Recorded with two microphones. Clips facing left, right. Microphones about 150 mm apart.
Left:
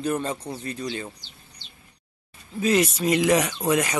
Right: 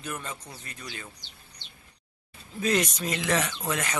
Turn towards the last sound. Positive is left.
turn(degrees=10)  # may be behind; listen again after turning